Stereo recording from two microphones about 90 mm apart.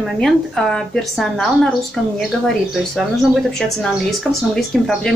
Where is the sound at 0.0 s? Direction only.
Centre (ahead or behind).